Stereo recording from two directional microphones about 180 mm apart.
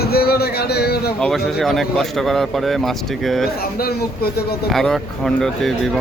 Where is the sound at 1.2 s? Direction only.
Centre (ahead or behind).